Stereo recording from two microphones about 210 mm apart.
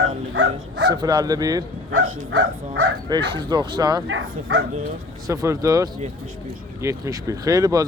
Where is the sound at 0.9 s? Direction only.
20° right (ahead or behind).